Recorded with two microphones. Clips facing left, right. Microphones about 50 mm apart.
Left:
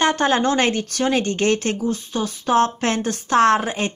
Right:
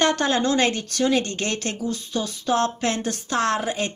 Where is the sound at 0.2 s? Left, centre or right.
Left.